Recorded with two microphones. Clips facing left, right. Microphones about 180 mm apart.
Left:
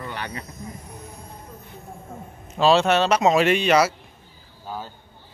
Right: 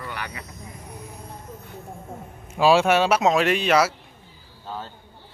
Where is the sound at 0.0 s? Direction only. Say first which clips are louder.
Left 2 dB; 30° left (ahead or behind).